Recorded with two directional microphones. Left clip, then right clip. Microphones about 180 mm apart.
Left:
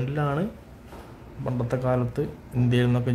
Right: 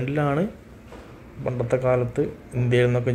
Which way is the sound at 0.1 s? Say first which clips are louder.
Right 5 dB; 5° right (ahead or behind).